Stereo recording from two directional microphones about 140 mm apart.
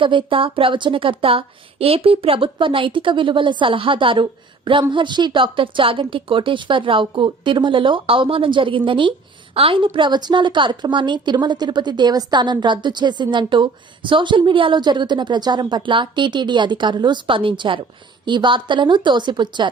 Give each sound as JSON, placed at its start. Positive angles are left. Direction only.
{"t": 0.0, "sound": "a woman's voice", "side_deg": -35}